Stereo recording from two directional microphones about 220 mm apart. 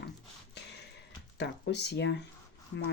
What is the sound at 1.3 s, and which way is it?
Speech, 50° left (ahead or behind).